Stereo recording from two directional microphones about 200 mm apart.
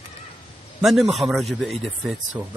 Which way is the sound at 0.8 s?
Centre (ahead or behind).